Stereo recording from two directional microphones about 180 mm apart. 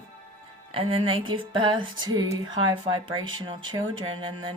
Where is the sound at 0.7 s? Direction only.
30° right (ahead or behind).